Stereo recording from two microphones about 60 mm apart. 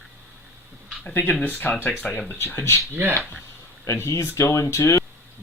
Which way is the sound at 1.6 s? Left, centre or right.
Left.